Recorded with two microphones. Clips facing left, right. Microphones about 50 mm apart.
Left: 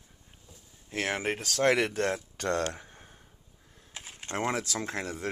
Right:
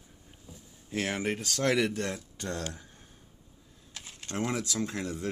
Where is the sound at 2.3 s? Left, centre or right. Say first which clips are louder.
Left 6 dB; left.